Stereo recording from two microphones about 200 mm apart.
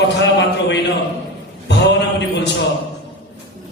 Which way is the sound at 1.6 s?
60° left (ahead or behind).